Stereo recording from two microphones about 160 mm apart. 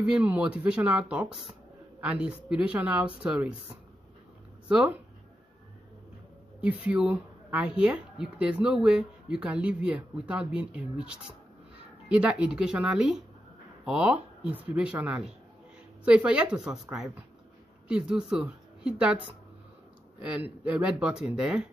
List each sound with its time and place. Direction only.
0.0 s speech: 5° right (ahead or behind)
4.6 s speech: 5° right (ahead or behind)
6.6 s speech: 10° right (ahead or behind)
17.8 s a woman's voice: 5° right (ahead or behind)